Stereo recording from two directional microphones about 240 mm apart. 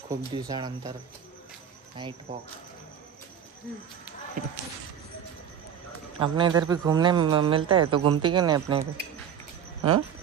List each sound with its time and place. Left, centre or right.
0.1 s speech: centre
2.0 s speech: centre
4.4 s speech: right
6.1 s speech: right